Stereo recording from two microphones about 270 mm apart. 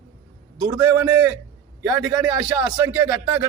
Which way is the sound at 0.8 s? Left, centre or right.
Centre.